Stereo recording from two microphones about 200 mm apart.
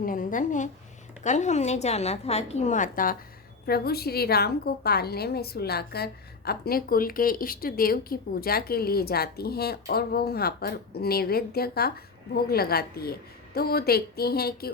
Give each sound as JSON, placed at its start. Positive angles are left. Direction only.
{"t": 0.0, "sound": "a woman's voice", "side_deg": 45}